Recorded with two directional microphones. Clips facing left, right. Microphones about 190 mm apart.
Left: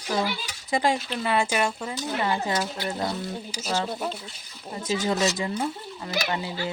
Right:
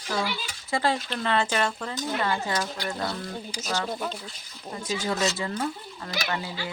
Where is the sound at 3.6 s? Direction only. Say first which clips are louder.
Left 3 dB; 25° left (ahead or behind).